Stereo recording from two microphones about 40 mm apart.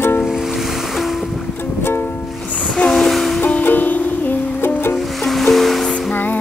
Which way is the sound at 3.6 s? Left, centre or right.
Left.